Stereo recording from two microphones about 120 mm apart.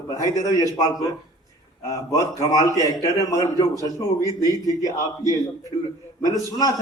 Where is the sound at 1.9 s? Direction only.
30° left (ahead or behind).